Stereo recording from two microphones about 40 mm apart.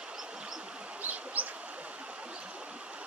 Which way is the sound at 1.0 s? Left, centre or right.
Right.